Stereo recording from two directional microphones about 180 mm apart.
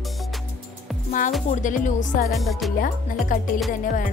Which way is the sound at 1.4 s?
45° left (ahead or behind).